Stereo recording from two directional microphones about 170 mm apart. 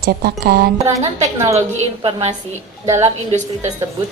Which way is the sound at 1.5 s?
40° right (ahead or behind).